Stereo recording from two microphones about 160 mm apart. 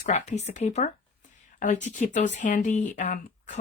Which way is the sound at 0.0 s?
45° left (ahead or behind).